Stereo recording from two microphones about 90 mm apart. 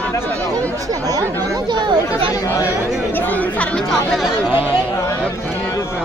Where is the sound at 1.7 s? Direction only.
60° right (ahead or behind).